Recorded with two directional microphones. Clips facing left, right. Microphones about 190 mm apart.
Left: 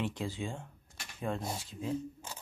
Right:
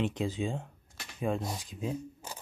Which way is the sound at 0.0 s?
20° right (ahead or behind).